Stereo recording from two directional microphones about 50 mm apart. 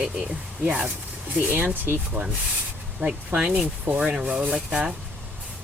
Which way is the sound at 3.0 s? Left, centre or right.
Centre.